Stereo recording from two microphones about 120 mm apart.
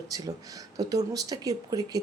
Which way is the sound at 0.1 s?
30° right (ahead or behind).